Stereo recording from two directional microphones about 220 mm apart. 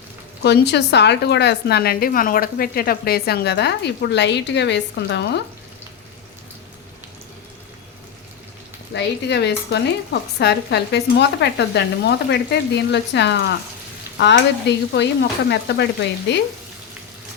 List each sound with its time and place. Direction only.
0.4 s a woman's voice: 50° left (ahead or behind)
8.9 s a woman's voice: 50° left (ahead or behind)